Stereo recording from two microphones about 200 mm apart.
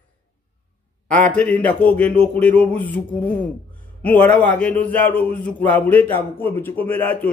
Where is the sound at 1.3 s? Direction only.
5° left (ahead or behind).